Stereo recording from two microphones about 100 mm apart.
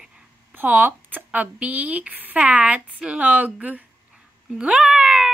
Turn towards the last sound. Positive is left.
turn(degrees=-5)  # may be behind; listen again after turning